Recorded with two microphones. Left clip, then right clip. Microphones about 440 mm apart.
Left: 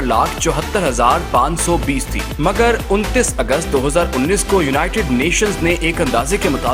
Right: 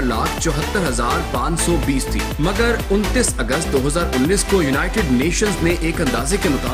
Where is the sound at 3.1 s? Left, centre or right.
Centre.